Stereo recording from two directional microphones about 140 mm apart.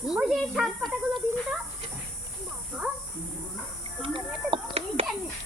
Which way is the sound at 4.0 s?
40° right (ahead or behind).